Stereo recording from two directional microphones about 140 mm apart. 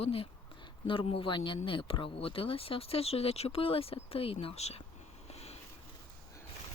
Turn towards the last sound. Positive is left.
turn(degrees=50)  # may be behind; listen again after turning